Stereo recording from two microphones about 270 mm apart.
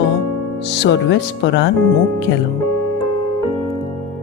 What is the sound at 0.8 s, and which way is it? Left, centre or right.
Speech, left.